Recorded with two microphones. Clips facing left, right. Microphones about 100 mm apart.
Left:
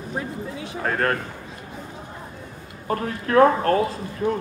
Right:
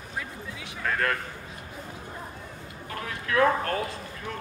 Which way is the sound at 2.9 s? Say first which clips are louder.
Left 9 dB; 40° left (ahead or behind).